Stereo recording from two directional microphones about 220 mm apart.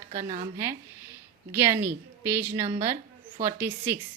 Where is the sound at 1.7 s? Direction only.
10° right (ahead or behind).